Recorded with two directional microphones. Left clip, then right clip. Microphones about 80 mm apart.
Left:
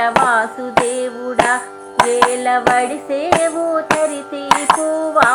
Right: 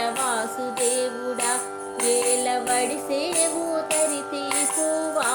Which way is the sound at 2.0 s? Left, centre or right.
Right.